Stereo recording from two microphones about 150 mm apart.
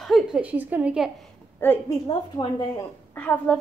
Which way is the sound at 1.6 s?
15° left (ahead or behind).